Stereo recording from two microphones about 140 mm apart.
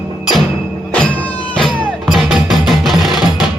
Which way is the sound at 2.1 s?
Centre (ahead or behind).